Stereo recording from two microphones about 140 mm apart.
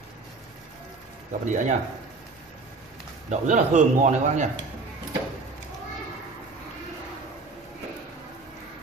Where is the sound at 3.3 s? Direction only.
60° right (ahead or behind).